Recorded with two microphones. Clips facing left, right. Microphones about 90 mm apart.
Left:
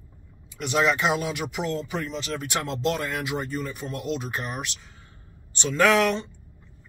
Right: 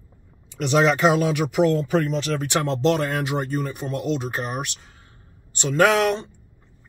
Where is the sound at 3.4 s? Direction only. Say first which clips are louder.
Right 4 dB; 55° right (ahead or behind).